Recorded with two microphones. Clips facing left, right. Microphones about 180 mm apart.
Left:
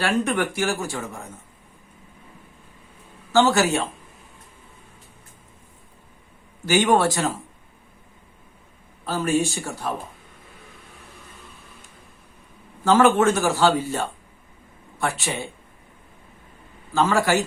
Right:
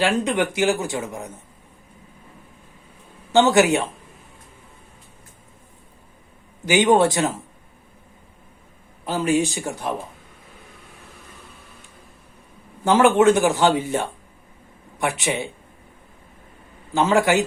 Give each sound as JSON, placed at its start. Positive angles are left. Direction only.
{"t": 0.0, "sound": "speech", "side_deg": -20}
{"t": 3.3, "sound": "speech", "side_deg": -20}
{"t": 6.7, "sound": "speech", "side_deg": -20}
{"t": 9.0, "sound": "speech", "side_deg": -15}
{"t": 12.8, "sound": "speech", "side_deg": -15}
{"t": 16.9, "sound": "speech", "side_deg": -20}